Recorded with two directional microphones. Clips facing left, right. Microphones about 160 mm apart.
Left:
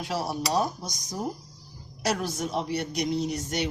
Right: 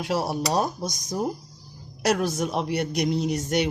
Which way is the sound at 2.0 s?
65° right (ahead or behind).